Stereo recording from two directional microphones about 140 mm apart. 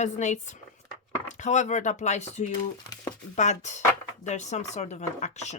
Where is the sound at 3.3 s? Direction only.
55° left (ahead or behind).